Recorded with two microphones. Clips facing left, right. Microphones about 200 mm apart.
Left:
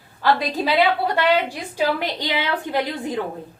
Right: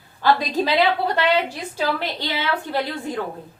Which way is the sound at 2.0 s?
15° left (ahead or behind).